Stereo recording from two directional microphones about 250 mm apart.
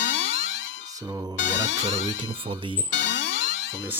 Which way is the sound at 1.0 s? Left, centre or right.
Centre.